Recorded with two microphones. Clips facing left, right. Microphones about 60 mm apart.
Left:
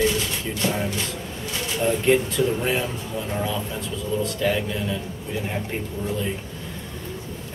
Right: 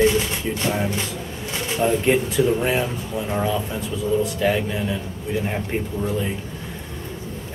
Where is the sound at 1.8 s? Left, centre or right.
Centre.